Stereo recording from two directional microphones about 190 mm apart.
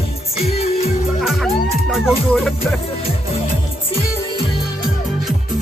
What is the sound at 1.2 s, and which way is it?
Music, centre (ahead or behind).